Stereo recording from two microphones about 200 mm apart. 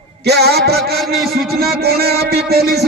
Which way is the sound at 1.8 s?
50° right (ahead or behind).